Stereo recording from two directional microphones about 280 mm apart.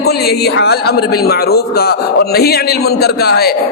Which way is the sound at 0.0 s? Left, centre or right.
Left.